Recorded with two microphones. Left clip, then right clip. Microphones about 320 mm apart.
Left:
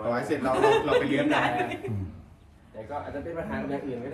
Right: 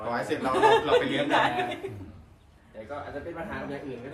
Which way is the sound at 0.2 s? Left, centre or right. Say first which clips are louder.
Right 2 dB; centre.